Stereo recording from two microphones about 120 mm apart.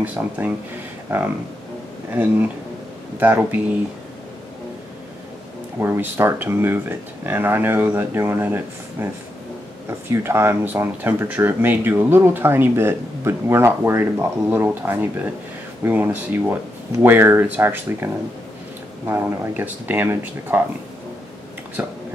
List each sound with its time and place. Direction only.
0.2 s speech: 20° right (ahead or behind)
2.0 s speech: 15° right (ahead or behind)
5.8 s speech: 20° right (ahead or behind)
21.8 s speech: 15° right (ahead or behind)